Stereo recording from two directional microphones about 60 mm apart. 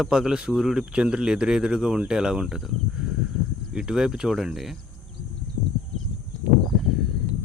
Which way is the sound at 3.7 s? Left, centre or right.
Centre.